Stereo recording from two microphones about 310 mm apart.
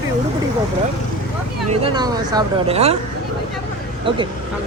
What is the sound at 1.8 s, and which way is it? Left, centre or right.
Speech, centre.